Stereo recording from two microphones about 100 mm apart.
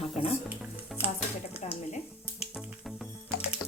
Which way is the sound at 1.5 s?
85° left.